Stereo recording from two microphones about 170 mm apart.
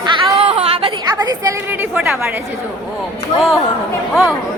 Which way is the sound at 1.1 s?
20° right (ahead or behind).